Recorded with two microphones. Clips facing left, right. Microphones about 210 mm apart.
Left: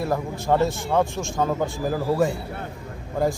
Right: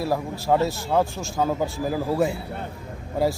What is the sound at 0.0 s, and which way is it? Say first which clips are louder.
A man's voice: even; 5° right (ahead or behind).